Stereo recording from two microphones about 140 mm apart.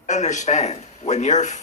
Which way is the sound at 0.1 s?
60° left (ahead or behind).